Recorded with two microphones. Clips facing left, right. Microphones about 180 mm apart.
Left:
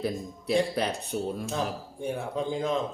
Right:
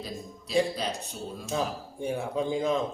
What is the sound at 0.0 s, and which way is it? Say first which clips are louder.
Speech: left 7 dB; 60° left (ahead or behind).